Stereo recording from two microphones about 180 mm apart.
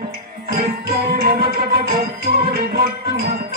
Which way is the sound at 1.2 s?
55° right (ahead or behind).